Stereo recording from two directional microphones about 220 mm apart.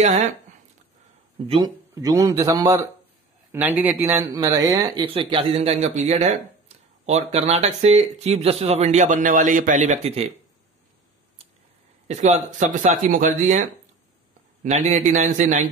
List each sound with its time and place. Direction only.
1.5 s speech: 20° right (ahead or behind)
12.1 s speech: 30° right (ahead or behind)